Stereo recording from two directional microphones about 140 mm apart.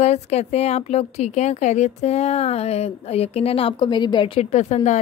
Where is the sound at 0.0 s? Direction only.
50° left (ahead or behind); by 4.3 s 35° left (ahead or behind).